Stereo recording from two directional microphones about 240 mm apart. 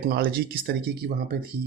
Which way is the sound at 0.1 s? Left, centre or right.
Right.